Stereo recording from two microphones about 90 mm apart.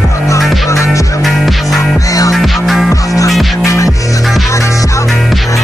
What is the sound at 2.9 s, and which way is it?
Music, 40° left (ahead or behind).